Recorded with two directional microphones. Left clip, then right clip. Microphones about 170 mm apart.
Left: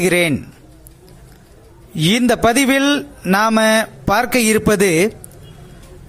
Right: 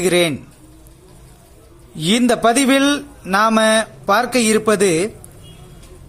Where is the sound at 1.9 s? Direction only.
25° left (ahead or behind).